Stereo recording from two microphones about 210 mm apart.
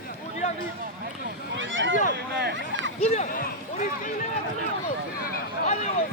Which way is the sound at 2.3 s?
55° right (ahead or behind).